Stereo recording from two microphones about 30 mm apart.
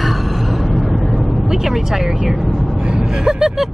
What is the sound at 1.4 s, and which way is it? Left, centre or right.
Speech, centre.